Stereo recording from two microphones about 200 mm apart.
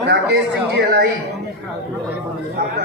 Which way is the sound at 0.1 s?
60° right (ahead or behind).